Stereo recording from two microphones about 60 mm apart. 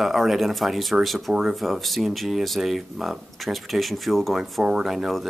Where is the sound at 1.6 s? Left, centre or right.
Centre.